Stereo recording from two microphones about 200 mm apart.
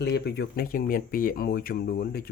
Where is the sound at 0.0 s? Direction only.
55° left (ahead or behind).